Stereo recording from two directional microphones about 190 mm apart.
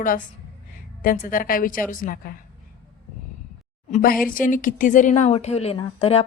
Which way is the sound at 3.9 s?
50° left (ahead or behind).